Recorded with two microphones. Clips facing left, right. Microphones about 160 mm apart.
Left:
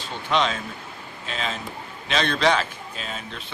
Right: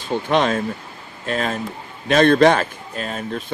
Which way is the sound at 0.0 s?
50° right (ahead or behind).